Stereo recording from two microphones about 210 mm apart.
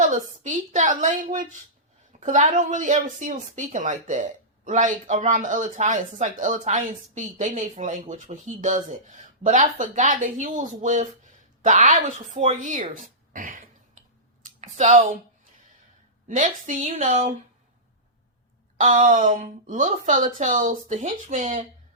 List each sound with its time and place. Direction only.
0.1 s speech: 35° right (ahead or behind)
14.6 s a sound: 35° right (ahead or behind)
16.3 s speech: 35° right (ahead or behind)
18.8 s speech: 35° right (ahead or behind)